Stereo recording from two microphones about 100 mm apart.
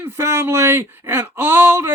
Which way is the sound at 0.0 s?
25° right (ahead or behind).